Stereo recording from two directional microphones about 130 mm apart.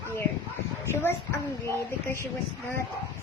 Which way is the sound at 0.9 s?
15° left (ahead or behind).